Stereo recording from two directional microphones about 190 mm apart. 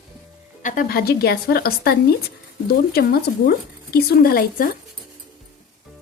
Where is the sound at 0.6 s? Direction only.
45° left (ahead or behind).